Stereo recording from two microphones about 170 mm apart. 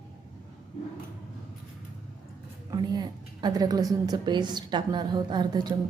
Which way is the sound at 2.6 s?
25° right (ahead or behind).